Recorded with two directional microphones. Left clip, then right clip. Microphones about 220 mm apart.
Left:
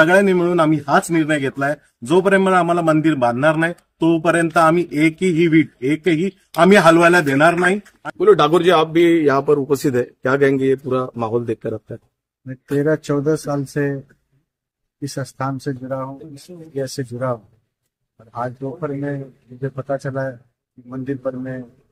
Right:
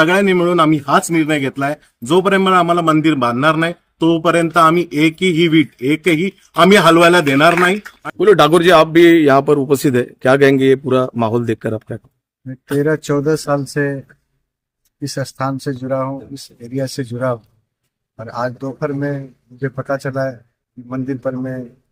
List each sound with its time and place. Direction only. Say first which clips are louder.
0.0 s speech: right 1 dB; 10° right (ahead or behind)
8.2 s a man's voice: right 3 dB; 40° right (ahead or behind)
12.8 s speech: right 2 dB; 5° right (ahead or behind)
15.0 s speech: right 4 dB; 5° right (ahead or behind)
18.3 s speech: right 4 dB; 5° right (ahead or behind)